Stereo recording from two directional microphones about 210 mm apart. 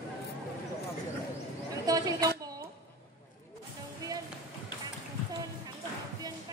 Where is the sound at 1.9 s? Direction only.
15° right (ahead or behind).